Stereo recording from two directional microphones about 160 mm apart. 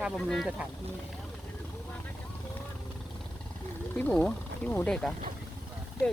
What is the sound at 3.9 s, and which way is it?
Speech, 10° left (ahead or behind).